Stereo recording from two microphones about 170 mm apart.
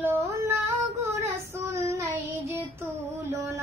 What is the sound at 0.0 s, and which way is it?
Female singing, 15° right (ahead or behind).